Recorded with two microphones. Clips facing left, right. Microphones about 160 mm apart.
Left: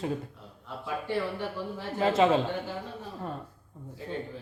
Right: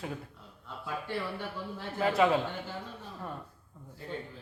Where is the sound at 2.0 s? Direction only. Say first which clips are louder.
Left 3 dB; 25° left (ahead or behind).